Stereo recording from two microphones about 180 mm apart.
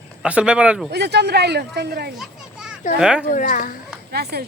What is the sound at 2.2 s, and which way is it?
Children playing, 5° right (ahead or behind).